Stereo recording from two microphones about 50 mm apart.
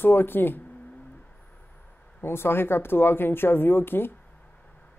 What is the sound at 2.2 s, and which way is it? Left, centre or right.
Speech, left.